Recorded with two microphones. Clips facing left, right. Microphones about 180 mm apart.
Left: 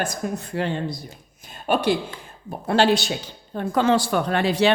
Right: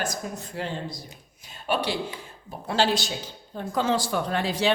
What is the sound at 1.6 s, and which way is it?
Speech, 50° left (ahead or behind).